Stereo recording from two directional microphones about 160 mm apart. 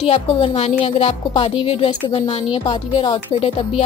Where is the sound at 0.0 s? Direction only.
40° left (ahead or behind).